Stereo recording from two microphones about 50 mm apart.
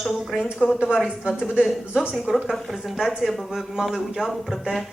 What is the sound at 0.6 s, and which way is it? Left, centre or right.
Speech, left.